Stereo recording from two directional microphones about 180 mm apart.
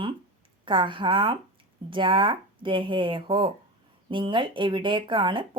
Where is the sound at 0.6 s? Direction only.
30° right (ahead or behind).